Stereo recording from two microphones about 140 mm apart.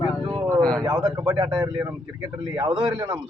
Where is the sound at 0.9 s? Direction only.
30° right (ahead or behind).